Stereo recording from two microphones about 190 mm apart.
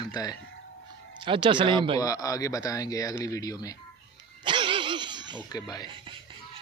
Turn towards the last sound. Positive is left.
turn(degrees=20)  # may be behind; listen again after turning